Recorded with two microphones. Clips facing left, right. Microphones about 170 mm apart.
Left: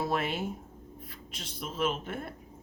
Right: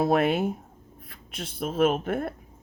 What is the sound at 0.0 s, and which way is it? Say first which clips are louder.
A woman's voice: right 9 dB; 60° right (ahead or behind).